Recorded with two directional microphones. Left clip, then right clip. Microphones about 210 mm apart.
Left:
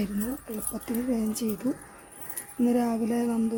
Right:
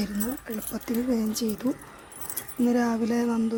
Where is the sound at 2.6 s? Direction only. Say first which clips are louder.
Right 1 dB; 15° left (ahead or behind).